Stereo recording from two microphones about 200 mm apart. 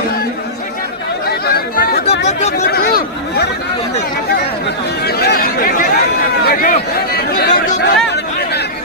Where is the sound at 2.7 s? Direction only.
50° left (ahead or behind).